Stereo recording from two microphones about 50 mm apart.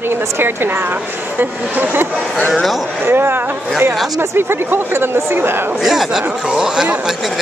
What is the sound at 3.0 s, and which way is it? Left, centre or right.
A woman's voice, right.